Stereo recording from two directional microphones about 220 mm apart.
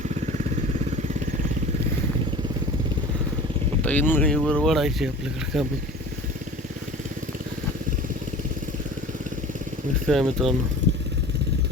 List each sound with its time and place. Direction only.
3.8 s speech: 10° left (ahead or behind)
10.1 s speech: centre (ahead or behind)
10.8 s motorcycle: 55° right (ahead or behind)